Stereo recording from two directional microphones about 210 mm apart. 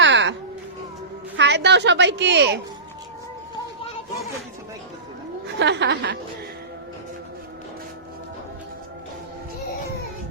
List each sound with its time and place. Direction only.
0.0 s a sound: 60° right (ahead or behind)
1.4 s a woman's voice: 55° right (ahead or behind)
5.5 s a woman's voice: 55° right (ahead or behind)